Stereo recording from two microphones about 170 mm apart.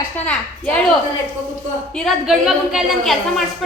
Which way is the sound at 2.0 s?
Centre (ahead or behind).